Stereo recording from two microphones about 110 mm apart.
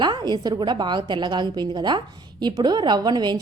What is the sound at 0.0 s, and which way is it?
A woman's voice, 45° right (ahead or behind).